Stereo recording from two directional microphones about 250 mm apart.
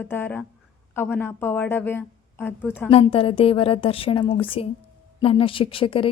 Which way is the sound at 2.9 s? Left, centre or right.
Left.